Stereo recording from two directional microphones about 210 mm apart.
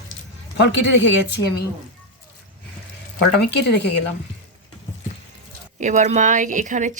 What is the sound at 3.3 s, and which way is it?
Speech, 55° left (ahead or behind).